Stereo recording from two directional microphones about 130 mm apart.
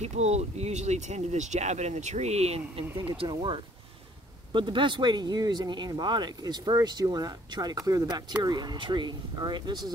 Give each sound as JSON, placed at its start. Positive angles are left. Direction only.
{"t": 0.0, "sound": "speech", "side_deg": -55}